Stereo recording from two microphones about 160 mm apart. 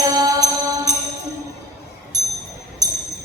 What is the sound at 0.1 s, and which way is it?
Music, 25° right (ahead or behind).